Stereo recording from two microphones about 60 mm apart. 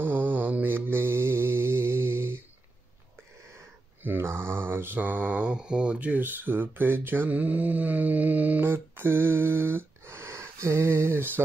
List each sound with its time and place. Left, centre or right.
0.0 s mantra: right
4.2 s mantra: right
8.6 s a sound: right